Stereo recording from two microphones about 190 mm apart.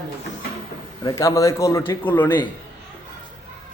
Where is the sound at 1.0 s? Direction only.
20° left (ahead or behind).